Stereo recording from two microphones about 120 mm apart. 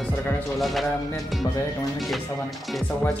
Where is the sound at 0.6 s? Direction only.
Centre (ahead or behind).